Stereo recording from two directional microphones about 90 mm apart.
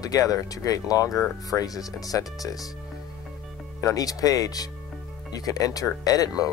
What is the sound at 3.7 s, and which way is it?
Speech, 40° left (ahead or behind).